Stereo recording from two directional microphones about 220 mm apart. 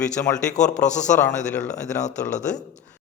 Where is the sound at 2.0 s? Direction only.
35° left (ahead or behind).